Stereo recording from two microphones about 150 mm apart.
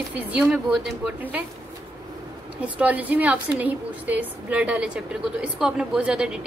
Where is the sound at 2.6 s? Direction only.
10° right (ahead or behind).